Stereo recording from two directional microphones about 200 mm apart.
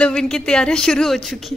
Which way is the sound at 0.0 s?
5° left (ahead or behind).